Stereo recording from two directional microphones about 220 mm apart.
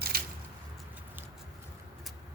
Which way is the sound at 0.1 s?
45° right (ahead or behind).